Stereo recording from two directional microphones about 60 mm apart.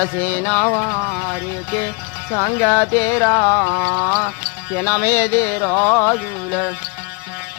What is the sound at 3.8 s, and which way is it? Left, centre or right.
Music, centre.